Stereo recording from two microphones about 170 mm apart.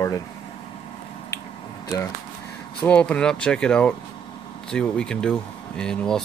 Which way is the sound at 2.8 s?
5° left (ahead or behind).